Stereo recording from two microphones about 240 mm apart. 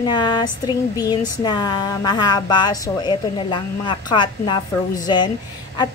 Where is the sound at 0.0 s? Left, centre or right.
Centre.